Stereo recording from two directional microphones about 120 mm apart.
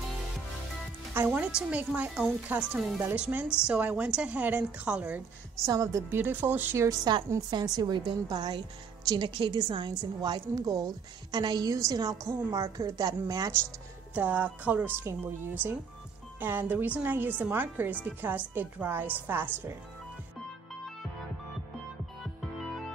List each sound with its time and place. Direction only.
1.1 s a woman's voice: 15° right (ahead or behind)
3.0 s a woman's voice: 15° right (ahead or behind)
5.7 s a woman's voice: 30° right (ahead or behind)
6.9 s a woman's voice: 35° right (ahead or behind)
14.1 s a woman's voice: 15° right (ahead or behind)